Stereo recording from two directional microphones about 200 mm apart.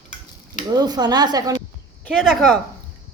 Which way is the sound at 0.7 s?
20° right (ahead or behind).